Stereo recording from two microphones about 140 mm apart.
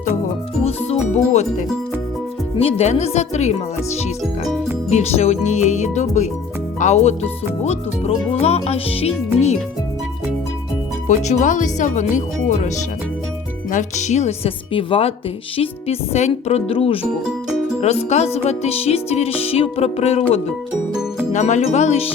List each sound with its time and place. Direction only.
0.6 s music: 50° left (ahead or behind)
2.6 s speech: 45° left (ahead or behind)
4.9 s speech: 50° left (ahead or behind)
11.2 s speech: 55° left (ahead or behind)
17.0 s music: 5° right (ahead or behind)
17.7 s speech: 50° left (ahead or behind)
21.3 s speech: 55° left (ahead or behind)